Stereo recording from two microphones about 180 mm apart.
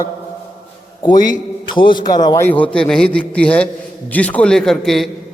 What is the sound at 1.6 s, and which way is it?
Speech, 25° left (ahead or behind).